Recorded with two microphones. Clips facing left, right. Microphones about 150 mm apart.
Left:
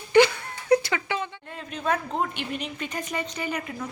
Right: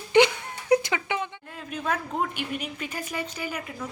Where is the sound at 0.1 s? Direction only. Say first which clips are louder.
Left 1 dB; 20° right (ahead or behind).